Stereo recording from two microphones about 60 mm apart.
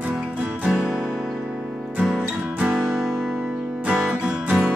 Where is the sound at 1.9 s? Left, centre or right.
Centre.